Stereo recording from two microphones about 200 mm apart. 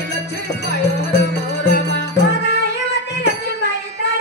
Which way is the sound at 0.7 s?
60° left (ahead or behind).